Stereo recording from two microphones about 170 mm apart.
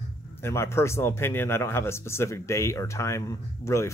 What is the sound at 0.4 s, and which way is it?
Speech, 15° left (ahead or behind).